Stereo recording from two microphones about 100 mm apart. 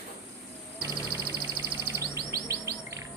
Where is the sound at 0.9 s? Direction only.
45° left (ahead or behind).